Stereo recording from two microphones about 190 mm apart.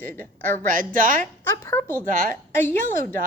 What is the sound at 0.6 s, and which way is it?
Speech, 45° right (ahead or behind).